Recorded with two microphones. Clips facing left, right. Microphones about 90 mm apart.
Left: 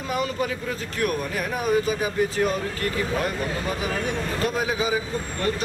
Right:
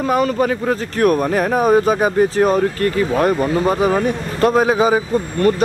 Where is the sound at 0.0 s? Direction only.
50° right (ahead or behind).